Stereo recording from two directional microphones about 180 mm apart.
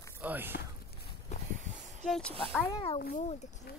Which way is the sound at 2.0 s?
Centre (ahead or behind).